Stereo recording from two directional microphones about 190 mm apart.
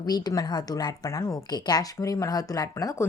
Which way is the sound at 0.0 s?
20° left (ahead or behind).